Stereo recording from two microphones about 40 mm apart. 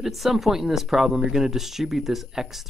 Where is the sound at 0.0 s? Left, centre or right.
Centre.